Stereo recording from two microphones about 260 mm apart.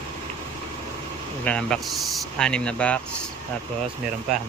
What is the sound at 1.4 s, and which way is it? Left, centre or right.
Speech, centre.